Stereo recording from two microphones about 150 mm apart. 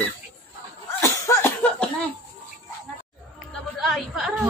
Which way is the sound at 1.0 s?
15° left (ahead or behind).